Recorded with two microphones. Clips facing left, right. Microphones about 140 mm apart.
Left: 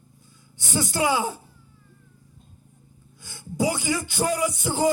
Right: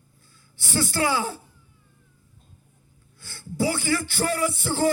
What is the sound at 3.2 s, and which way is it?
Speech, 15° left (ahead or behind).